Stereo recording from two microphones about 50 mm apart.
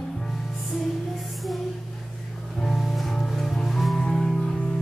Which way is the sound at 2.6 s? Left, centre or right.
Centre.